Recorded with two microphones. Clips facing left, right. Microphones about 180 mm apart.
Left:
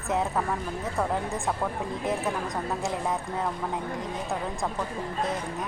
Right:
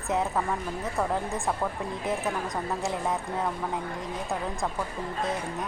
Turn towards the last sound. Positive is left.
turn(degrees=0)  # may be behind; listen again after turning